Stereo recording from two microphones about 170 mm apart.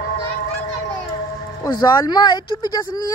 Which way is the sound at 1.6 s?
25° left (ahead or behind).